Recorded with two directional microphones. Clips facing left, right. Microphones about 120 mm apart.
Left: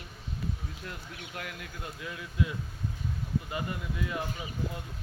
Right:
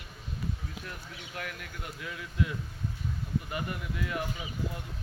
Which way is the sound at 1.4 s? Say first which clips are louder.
Right 1 dB; 20° left (ahead or behind).